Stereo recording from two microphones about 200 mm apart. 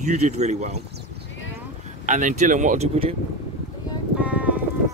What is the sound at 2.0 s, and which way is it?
Speech, 40° right (ahead or behind).